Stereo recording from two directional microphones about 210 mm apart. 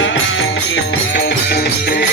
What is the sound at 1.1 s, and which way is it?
Music, 50° left (ahead or behind).